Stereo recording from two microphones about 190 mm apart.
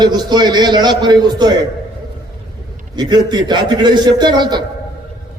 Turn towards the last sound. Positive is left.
turn(degrees=-20)  # may be behind; listen again after turning